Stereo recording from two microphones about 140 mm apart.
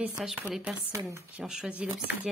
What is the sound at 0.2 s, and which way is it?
Speech, centre (ahead or behind).